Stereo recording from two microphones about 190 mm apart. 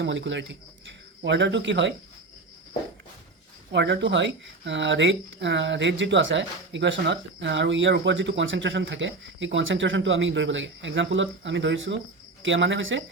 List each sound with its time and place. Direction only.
0.0 s speech: 70° right (ahead or behind)
3.7 s speech: 65° right (ahead or behind)